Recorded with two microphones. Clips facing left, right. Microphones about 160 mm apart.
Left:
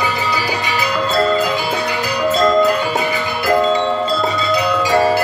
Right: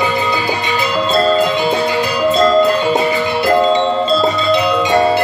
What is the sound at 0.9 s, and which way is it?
Music, 25° right (ahead or behind).